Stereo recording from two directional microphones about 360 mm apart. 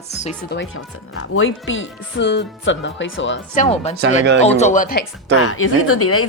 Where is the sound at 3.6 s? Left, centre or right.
Centre.